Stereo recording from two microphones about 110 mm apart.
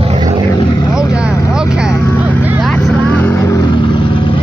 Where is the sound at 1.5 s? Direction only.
5° right (ahead or behind).